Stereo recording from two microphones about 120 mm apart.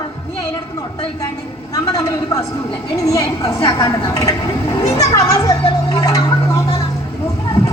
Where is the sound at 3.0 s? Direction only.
30° left (ahead or behind).